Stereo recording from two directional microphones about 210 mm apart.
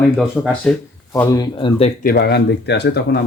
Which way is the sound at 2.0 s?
50° left (ahead or behind).